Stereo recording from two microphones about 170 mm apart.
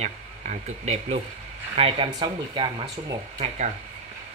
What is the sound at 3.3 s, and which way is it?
Speech, 45° right (ahead or behind).